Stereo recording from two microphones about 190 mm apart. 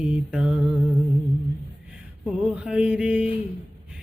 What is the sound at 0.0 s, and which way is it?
Mantra, 5° right (ahead or behind).